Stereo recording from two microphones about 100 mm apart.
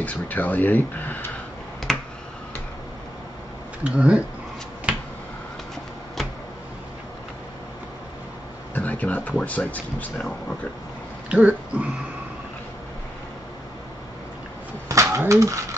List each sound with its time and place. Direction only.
0.0 s speech: 15° left (ahead or behind)
1.9 s finger snapping: 5° left (ahead or behind)
3.8 s speech: 10° right (ahead or behind)
8.7 s a sound: 15° left (ahead or behind)
9.4 s speech: 15° left (ahead or behind)
11.2 s throat clearing: 15° right (ahead or behind)
14.9 s pigeon: 30° right (ahead or behind)